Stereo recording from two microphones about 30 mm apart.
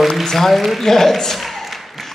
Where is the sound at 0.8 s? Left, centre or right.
Centre.